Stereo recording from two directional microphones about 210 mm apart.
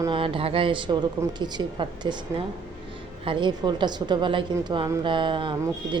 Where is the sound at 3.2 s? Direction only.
20° right (ahead or behind).